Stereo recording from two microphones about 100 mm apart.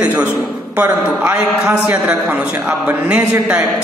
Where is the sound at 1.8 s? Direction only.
10° right (ahead or behind).